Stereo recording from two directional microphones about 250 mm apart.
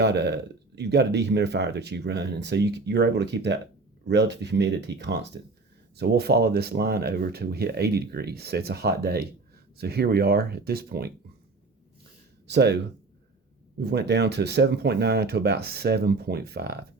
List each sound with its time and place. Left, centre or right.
0.0 s speech: right
12.5 s speech: right
13.7 s speech: right